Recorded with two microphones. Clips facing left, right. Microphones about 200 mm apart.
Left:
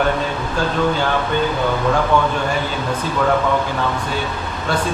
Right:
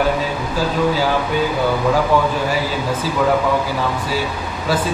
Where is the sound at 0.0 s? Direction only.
5° right (ahead or behind).